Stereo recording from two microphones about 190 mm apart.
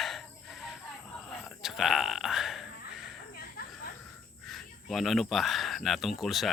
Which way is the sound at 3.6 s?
55° left (ahead or behind).